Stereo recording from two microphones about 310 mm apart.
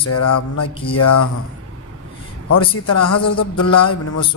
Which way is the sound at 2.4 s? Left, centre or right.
Left.